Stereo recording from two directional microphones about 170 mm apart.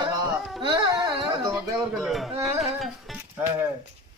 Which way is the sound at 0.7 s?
30° right (ahead or behind).